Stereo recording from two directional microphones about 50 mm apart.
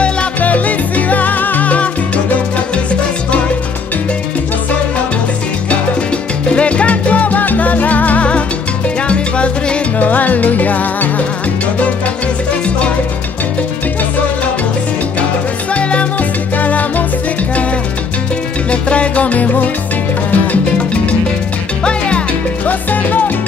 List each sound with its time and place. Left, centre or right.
0.0 s salsa music: left
6.5 s salsa music: left
15.7 s music: left
18.7 s salsa music: left
21.8 s music: left
22.7 s music: left